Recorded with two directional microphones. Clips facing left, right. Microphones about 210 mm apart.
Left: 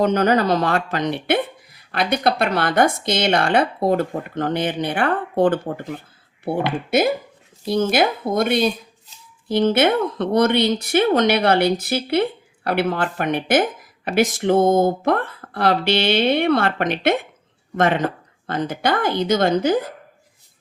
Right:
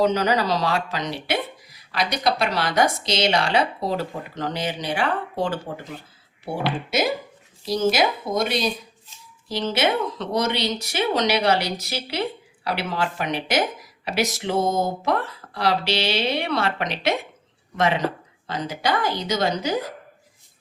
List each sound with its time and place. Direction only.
0.0 s speech: 55° left (ahead or behind)